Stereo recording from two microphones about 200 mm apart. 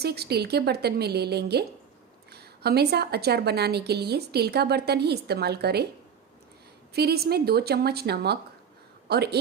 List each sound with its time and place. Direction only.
0.0 s a woman's voice: 50° right (ahead or behind)
6.9 s a woman's voice: 50° right (ahead or behind)